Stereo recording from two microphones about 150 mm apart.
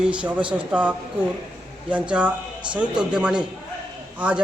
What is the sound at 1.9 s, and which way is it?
Speech, 10° right (ahead or behind).